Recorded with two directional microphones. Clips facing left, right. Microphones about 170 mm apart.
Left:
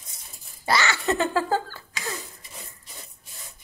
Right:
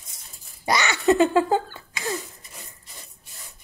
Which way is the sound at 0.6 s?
20° right (ahead or behind).